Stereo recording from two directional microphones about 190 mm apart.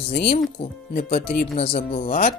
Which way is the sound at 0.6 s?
55° left (ahead or behind).